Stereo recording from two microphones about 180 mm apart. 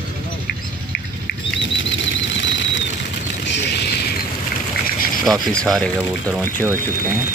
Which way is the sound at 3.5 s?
70° left (ahead or behind).